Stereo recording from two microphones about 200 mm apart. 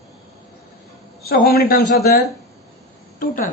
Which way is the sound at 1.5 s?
50° left (ahead or behind).